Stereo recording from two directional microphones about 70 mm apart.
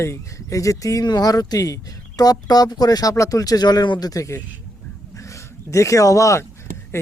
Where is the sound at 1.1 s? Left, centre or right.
Left.